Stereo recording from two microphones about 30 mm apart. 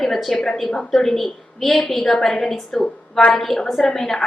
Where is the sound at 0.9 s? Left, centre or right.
Centre.